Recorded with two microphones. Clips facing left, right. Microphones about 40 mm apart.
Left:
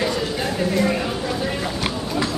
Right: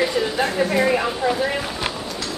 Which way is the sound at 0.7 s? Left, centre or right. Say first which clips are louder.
Right 2 dB; centre.